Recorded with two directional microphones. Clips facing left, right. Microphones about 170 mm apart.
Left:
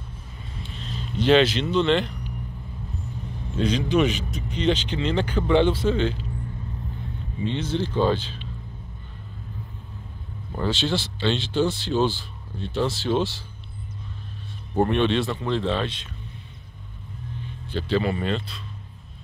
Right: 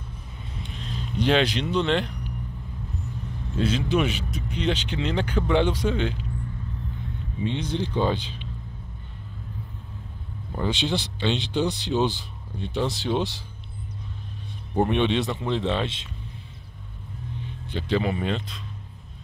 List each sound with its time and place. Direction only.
0.7 s speech: 10° right (ahead or behind)
3.6 s speech: 5° right (ahead or behind)
7.5 s speech: 15° right (ahead or behind)
10.7 s speech: 15° right (ahead or behind)
14.9 s speech: 15° right (ahead or behind)
17.7 s speech: 15° right (ahead or behind)